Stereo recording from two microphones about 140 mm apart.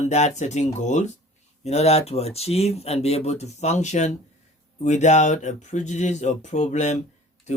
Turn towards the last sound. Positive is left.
turn(degrees=55)  # may be behind; listen again after turning